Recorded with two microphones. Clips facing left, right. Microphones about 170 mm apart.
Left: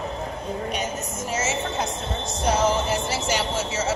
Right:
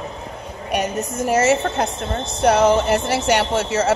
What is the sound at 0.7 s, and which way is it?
A woman's voice, 65° right (ahead or behind).